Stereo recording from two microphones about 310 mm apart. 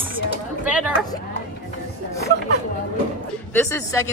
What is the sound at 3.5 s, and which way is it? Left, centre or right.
Speech, centre.